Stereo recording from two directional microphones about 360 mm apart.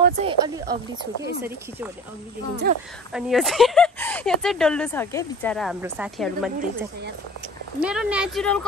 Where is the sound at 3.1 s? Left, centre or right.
Centre.